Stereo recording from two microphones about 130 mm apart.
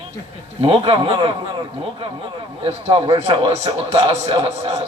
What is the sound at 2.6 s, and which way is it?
A man's voice, 50° right (ahead or behind).